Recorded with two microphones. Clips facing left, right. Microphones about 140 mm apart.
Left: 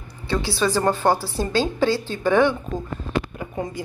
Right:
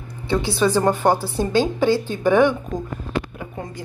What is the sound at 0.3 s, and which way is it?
A woman's voice, 20° right (ahead or behind).